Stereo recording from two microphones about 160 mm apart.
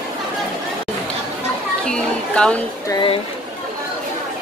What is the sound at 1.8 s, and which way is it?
Speech, 5° left (ahead or behind).